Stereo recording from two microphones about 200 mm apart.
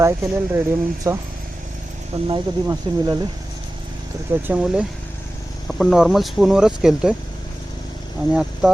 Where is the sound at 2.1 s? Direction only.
30° right (ahead or behind).